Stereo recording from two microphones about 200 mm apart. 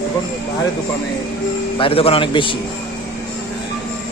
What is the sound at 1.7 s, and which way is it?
Speech, 25° left (ahead or behind).